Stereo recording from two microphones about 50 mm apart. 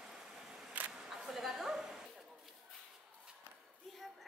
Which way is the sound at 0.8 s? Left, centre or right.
Right.